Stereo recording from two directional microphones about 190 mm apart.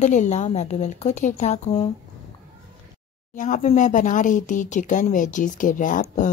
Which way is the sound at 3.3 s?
40° left (ahead or behind).